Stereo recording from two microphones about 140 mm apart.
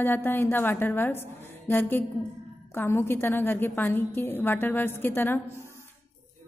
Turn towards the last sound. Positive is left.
turn(degrees=15)  # may be behind; listen again after turning